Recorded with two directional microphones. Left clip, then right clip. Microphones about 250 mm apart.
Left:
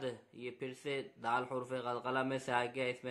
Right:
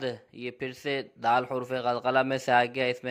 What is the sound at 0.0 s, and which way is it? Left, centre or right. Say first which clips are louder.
Speech: right 9 dB; right.